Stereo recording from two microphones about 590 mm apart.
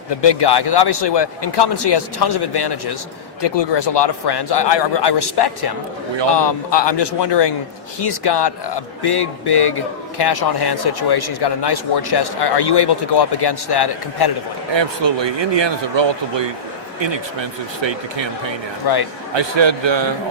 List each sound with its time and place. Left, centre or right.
0.1 s a man's voice: left
14.7 s speech: right
18.8 s a man's voice: left
19.3 s speech: right